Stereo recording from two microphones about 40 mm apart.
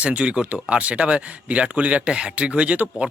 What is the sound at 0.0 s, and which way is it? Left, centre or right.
Speech, right.